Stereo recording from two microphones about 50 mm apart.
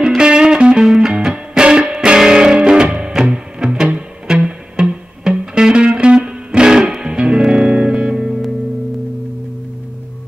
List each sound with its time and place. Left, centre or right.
0.2 s music: centre